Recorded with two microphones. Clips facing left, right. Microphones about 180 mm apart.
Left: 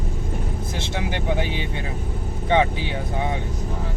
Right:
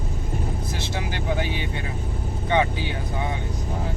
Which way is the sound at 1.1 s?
25° left (ahead or behind).